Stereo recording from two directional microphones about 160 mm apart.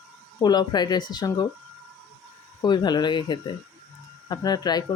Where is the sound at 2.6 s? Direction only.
25° left (ahead or behind).